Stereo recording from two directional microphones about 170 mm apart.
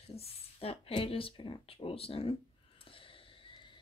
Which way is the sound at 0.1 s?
35° left (ahead or behind).